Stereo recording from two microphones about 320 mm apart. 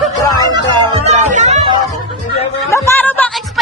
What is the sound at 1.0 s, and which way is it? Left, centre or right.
Music, right.